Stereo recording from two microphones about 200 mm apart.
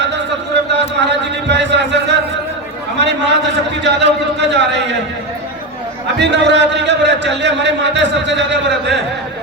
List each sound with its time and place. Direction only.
0.0 s a sound: 60° right (ahead or behind)
3.8 s speech: 60° right (ahead or behind)
6.1 s speech: 60° right (ahead or behind)